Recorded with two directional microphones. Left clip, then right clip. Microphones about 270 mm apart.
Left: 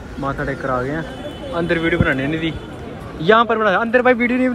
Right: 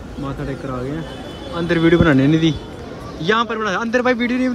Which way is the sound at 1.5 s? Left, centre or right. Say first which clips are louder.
Right 3 dB; centre.